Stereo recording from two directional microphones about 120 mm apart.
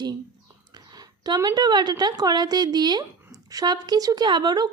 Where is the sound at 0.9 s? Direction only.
35° right (ahead or behind).